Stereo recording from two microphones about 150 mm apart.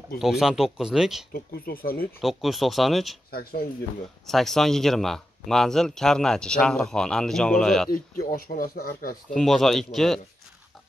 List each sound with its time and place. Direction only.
0.2 s speech: 5° right (ahead or behind)
1.3 s speech: 80° left
2.2 s speech: centre (ahead or behind)
3.3 s speech: 90° left
4.3 s speech: centre (ahead or behind)
7.9 s speech: 75° left (ahead or behind)
9.3 s speech: 5° left (ahead or behind)